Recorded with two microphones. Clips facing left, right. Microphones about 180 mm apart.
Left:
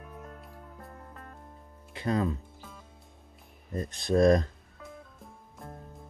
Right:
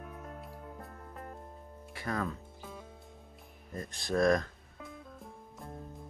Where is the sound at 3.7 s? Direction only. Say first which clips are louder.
Left 6 dB; 20° left (ahead or behind).